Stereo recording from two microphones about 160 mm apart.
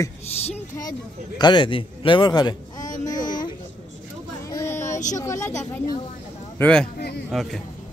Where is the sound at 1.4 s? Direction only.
30° left (ahead or behind).